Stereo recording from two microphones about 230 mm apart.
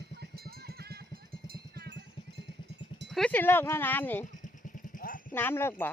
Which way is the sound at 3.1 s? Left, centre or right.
Centre.